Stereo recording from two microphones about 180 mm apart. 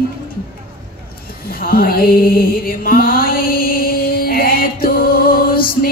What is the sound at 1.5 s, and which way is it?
Mantra, 55° left (ahead or behind).